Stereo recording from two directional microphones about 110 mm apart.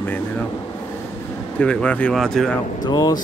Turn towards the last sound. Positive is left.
turn(degrees=40)  # may be behind; listen again after turning